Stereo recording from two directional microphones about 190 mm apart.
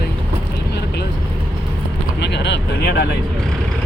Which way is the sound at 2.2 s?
65° left (ahead or behind).